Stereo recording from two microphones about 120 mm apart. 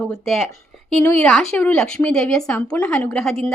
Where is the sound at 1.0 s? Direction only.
20° left (ahead or behind).